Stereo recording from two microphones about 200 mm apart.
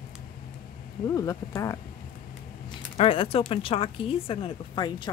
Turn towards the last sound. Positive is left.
turn(degrees=25)  # may be behind; listen again after turning